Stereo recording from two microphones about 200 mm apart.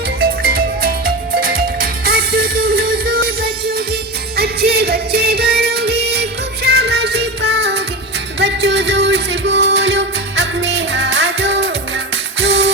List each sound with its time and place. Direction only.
0.2 s music: 50° right (ahead or behind)